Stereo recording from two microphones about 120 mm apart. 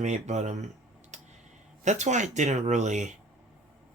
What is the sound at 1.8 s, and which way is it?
Speech, 80° right.